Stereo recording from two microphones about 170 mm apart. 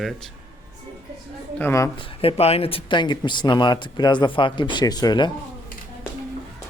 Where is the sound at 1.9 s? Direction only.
30° left (ahead or behind).